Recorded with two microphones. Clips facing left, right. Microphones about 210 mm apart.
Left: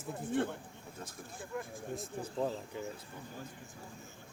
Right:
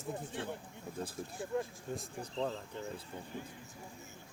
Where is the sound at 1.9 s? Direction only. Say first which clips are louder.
Left 2 dB; 5° left (ahead or behind).